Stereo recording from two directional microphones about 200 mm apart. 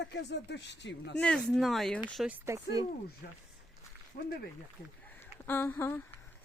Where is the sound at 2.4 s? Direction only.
15° right (ahead or behind).